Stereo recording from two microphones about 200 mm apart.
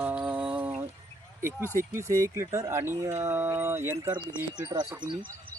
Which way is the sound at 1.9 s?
15° right (ahead or behind).